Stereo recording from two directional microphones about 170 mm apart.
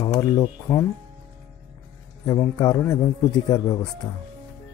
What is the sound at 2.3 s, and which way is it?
Speech, 20° left (ahead or behind).